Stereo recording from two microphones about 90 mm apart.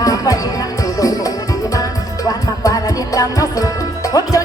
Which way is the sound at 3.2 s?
40° left (ahead or behind).